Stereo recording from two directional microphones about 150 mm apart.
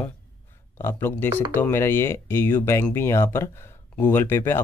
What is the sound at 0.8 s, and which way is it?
Speech, 15° left (ahead or behind).